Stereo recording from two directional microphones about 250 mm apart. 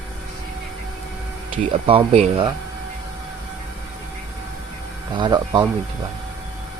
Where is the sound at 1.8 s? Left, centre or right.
Right.